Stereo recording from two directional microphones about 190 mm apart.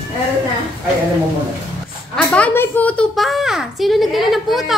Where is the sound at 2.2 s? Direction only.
5° left (ahead or behind).